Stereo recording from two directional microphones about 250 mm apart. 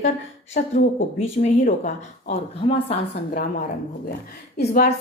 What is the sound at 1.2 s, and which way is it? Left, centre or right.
A woman's voice, left.